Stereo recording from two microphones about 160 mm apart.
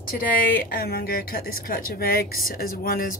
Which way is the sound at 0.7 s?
70° left (ahead or behind).